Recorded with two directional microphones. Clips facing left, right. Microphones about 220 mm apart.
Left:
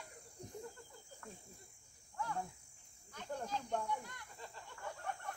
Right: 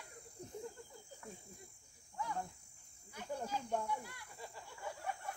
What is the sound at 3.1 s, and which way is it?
Cricket, 10° right (ahead or behind).